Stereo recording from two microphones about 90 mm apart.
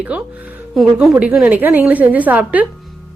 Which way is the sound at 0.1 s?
15° right (ahead or behind).